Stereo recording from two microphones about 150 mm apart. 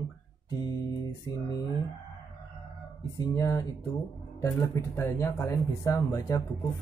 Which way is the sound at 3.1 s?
25° left (ahead or behind).